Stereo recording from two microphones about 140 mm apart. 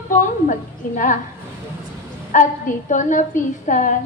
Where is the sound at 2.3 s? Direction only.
65° left (ahead or behind).